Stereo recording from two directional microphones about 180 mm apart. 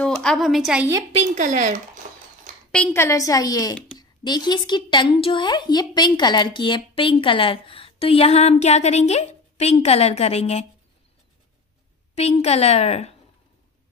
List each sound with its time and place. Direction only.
0.0 s a woman's voice: 5° left (ahead or behind)
1.1 s a woman's voice: 40° right (ahead or behind)
2.0 s cutlery: 50° right (ahead or behind)
2.7 s a woman's voice: 10° left (ahead or behind); by 10.6 s 35° left (ahead or behind)
12.2 s a woman's voice: 35° left (ahead or behind)